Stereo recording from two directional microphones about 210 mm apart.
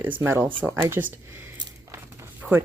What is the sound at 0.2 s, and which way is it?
Speech, 10° right (ahead or behind).